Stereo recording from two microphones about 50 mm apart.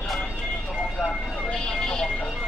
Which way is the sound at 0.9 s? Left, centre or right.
Left.